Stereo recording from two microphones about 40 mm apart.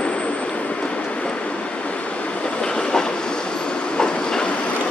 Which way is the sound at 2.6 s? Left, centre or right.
Centre.